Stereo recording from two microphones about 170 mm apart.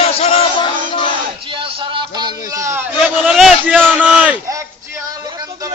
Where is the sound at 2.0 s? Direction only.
25° right (ahead or behind).